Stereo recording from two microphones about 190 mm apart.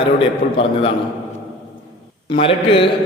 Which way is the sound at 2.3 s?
30° left (ahead or behind).